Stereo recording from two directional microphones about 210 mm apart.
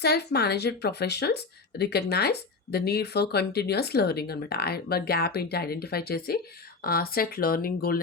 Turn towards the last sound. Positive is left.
turn(degrees=45)  # may be behind; listen again after turning